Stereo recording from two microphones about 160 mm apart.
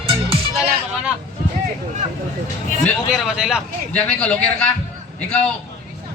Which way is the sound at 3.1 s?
Centre (ahead or behind).